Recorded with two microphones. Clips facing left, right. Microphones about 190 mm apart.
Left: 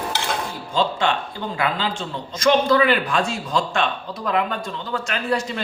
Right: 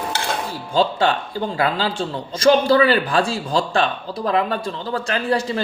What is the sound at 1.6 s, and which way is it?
Speech, 35° right (ahead or behind).